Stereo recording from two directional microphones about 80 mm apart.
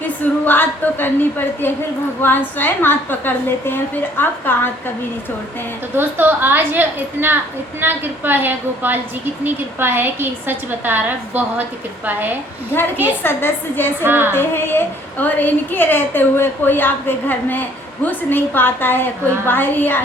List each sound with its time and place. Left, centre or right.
0.4 s a woman's voice: left
6.0 s a woman's voice: right
13.2 s a woman's voice: left
14.0 s a woman's voice: right
14.3 s a woman's voice: left